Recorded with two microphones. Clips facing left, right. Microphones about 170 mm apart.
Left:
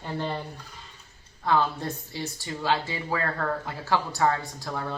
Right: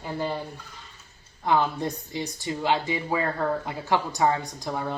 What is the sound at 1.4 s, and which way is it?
Speech, 15° right (ahead or behind).